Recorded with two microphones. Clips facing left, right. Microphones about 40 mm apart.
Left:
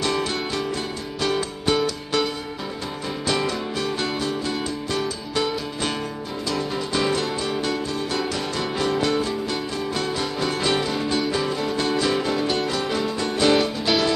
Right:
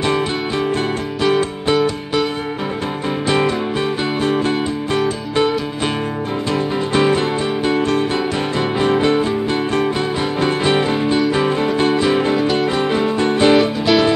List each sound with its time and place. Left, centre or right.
0.0 s music: right
3.3 s music: right
6.5 s music: right
13.6 s music: centre